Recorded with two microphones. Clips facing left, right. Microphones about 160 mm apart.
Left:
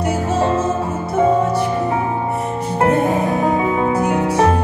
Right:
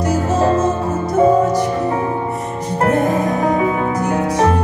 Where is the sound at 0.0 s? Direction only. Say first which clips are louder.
Right 2 dB; 35° right (ahead or behind).